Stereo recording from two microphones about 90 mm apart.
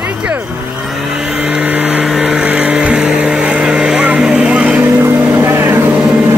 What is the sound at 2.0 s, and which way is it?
Vehicle, 5° right (ahead or behind).